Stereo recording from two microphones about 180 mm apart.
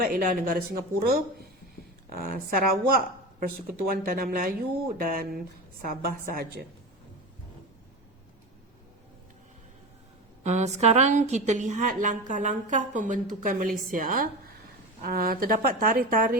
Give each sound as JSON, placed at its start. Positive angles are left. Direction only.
{"t": 0.0, "sound": "a woman's voice", "side_deg": -50}
{"t": 10.4, "sound": "a woman's voice", "side_deg": -40}